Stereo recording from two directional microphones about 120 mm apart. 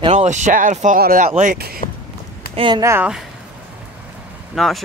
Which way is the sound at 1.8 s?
65° left (ahead or behind).